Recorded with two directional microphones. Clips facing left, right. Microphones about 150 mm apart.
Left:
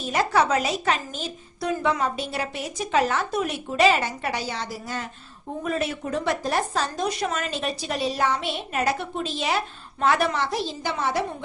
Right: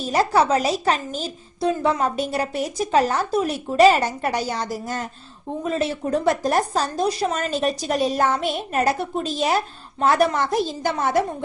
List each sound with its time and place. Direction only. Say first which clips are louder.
0.1 s a woman's voice: right 3 dB; 35° right (ahead or behind)
5.6 s speech: right 3 dB; 30° right (ahead or behind)
6.2 s a woman's voice: right 5 dB; 45° right (ahead or behind)